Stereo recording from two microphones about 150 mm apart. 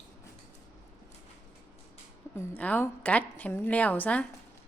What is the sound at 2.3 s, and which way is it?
A woman's voice, 10° left (ahead or behind).